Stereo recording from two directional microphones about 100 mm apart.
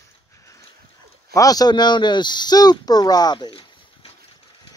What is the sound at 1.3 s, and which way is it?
Speech, 35° left (ahead or behind).